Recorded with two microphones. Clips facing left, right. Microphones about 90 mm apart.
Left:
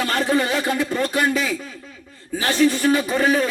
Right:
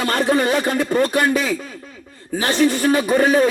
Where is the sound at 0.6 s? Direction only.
50° right (ahead or behind).